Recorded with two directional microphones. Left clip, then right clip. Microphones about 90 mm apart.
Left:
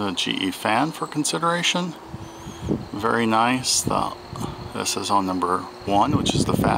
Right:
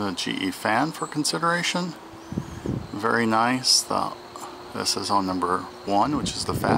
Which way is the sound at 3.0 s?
Centre (ahead or behind).